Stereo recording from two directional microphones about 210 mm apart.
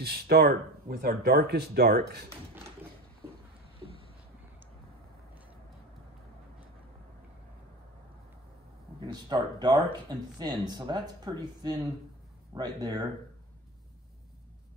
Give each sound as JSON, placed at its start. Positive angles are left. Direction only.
{"t": 0.0, "sound": "speech", "side_deg": -50}
{"t": 9.0, "sound": "speech", "side_deg": -20}